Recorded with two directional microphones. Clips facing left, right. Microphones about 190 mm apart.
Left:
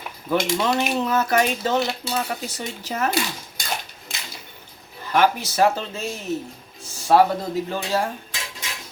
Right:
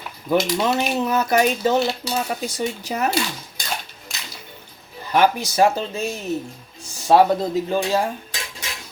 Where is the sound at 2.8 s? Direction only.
15° right (ahead or behind).